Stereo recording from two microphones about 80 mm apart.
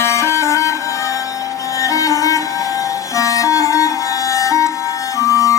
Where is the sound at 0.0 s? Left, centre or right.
Left.